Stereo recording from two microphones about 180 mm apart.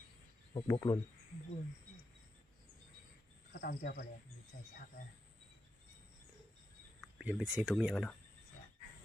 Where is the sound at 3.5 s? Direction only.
70° left (ahead or behind).